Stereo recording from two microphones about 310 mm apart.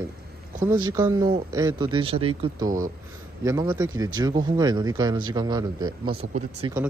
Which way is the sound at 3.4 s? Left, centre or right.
Centre.